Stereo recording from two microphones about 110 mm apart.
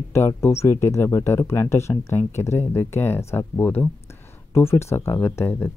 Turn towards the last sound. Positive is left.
turn(degrees=20)  # may be behind; listen again after turning